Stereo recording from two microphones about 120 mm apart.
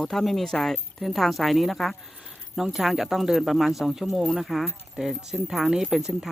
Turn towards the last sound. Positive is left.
turn(degrees=-5)  # may be behind; listen again after turning